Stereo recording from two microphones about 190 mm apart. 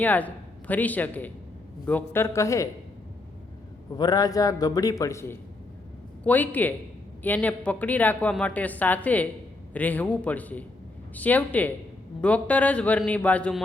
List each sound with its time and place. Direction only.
0.0 s a woman's voice: 10° left (ahead or behind)
3.9 s a man's voice: 20° left (ahead or behind)